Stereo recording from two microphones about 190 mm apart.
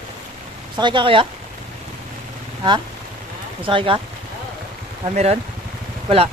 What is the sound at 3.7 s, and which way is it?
Speech, 25° right (ahead or behind).